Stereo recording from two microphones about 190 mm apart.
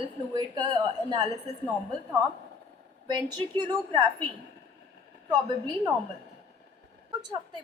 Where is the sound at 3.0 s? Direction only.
20° right (ahead or behind).